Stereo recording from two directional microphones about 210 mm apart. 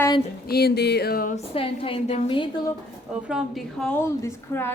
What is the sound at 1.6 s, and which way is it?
Speech, 25° left (ahead or behind).